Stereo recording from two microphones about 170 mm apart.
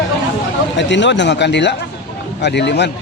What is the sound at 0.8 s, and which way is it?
A man's voice, 90° left.